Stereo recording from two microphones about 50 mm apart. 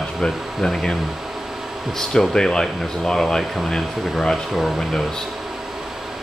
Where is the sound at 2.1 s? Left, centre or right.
Centre.